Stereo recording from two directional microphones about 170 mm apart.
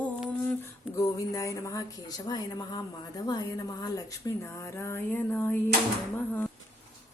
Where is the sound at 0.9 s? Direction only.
20° left (ahead or behind).